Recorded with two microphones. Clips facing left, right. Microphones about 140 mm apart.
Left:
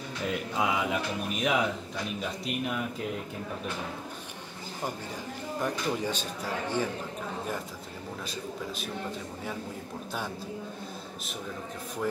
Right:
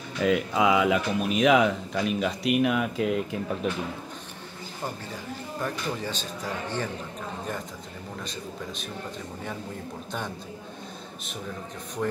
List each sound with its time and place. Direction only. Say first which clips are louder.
0.2 s speech: right 8 dB; 90° right
5.6 s speech: left 1 dB; 15° left (ahead or behind)
12.0 s speech: right 2 dB; centre (ahead or behind)